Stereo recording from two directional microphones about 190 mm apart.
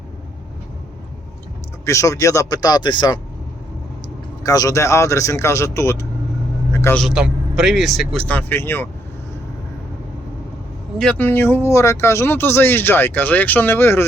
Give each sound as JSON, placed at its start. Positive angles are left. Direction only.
{"t": 1.8, "sound": "speech", "side_deg": 15}
{"t": 4.4, "sound": "speech", "side_deg": 15}
{"t": 7.0, "sound": "speech", "side_deg": -5}
{"t": 10.9, "sound": "speech", "side_deg": 5}